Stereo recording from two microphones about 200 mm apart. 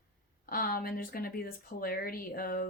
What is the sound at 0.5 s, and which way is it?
Speech, 45° left (ahead or behind).